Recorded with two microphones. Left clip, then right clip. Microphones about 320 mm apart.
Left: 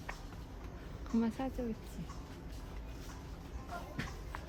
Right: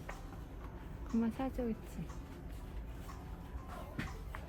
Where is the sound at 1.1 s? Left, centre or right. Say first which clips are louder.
Left 1 dB; centre.